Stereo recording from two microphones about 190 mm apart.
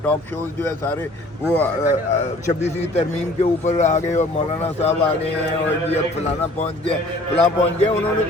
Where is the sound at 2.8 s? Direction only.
35° left (ahead or behind).